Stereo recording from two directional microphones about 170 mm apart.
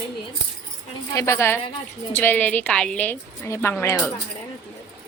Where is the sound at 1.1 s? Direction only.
15° left (ahead or behind).